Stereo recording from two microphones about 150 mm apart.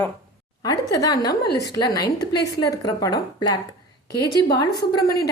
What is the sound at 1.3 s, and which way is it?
Speech, 90° left.